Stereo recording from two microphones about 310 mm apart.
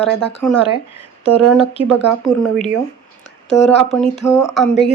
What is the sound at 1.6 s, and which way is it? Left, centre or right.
Speech, centre.